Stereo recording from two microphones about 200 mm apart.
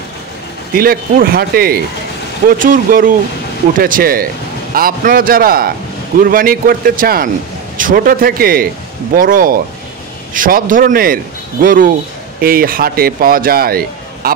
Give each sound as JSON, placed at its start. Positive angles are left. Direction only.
{"t": 0.7, "sound": "speech", "side_deg": -45}